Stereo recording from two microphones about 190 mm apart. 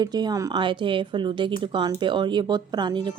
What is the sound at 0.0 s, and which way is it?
Speech, 20° right (ahead or behind).